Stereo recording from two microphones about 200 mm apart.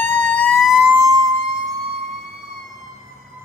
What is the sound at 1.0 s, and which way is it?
Emergency vehicle, 20° right (ahead or behind).